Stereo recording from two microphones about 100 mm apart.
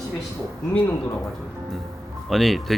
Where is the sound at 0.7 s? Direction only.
15° left (ahead or behind).